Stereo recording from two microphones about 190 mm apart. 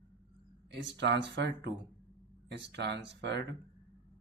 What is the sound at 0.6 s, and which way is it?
Speech, 65° right (ahead or behind).